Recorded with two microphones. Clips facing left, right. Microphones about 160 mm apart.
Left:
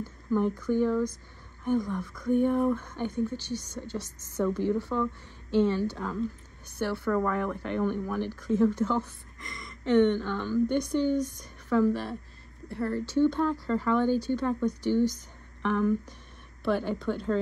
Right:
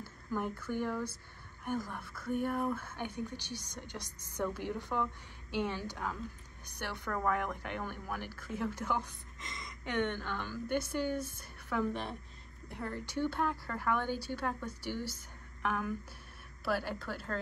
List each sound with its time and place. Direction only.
0.0 s a sound: 10° right (ahead or behind)
0.7 s a woman's voice: 10° right (ahead or behind)
11.8 s a woman's voice: 20° right (ahead or behind); by 17.4 s 5° right (ahead or behind)